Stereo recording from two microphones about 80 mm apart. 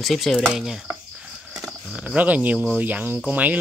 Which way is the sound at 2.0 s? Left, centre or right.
Centre.